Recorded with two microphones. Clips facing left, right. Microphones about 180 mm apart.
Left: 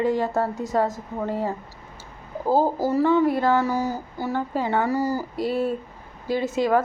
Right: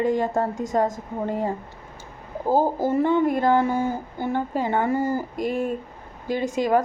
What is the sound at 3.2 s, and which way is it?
Speech, 20° right (ahead or behind).